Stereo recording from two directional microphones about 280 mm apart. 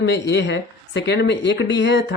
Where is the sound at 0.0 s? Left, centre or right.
Left.